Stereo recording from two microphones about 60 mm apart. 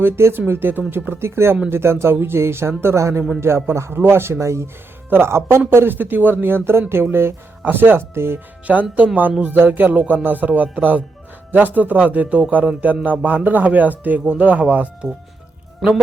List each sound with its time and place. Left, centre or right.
0.0 s speech: right
1.7 s speech: right
5.0 s speech: right
8.6 s a man's voice: right